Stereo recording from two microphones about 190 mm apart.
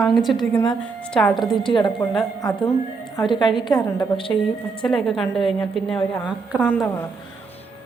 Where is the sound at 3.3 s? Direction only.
25° left (ahead or behind).